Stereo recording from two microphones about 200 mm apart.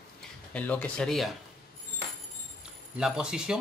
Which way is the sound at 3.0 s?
5° right (ahead or behind).